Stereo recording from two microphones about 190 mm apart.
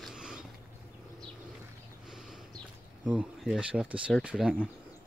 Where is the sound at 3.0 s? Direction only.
5° right (ahead or behind).